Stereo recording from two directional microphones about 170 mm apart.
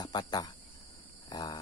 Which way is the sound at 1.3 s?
25° left (ahead or behind).